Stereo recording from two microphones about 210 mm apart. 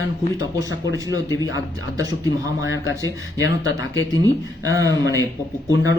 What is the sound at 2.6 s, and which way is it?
Speech, 65° left (ahead or behind).